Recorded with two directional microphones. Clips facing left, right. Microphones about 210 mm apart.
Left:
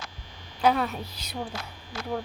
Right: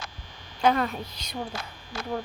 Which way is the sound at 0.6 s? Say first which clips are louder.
Even; 5° left (ahead or behind).